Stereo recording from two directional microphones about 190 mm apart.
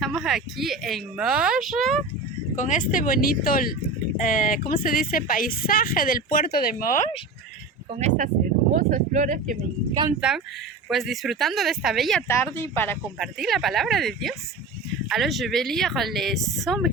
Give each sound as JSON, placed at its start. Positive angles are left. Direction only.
{"t": 0.0, "sound": "speech", "side_deg": 0}
{"t": 2.6, "sound": "speech", "side_deg": 40}
{"t": 7.9, "sound": "speech", "side_deg": -40}
{"t": 10.1, "sound": "speech", "side_deg": -5}
{"t": 12.3, "sound": "speech", "side_deg": 15}
{"t": 13.4, "sound": "speech", "side_deg": 0}